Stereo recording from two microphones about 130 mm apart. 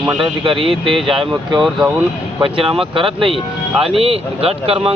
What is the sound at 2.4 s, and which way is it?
Speech, 45° right (ahead or behind).